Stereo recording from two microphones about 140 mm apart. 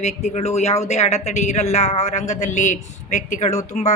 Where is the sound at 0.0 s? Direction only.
55° left (ahead or behind).